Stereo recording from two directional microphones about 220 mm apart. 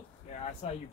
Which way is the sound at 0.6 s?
30° left (ahead or behind).